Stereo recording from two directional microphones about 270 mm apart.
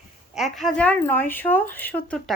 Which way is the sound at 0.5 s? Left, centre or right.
Centre.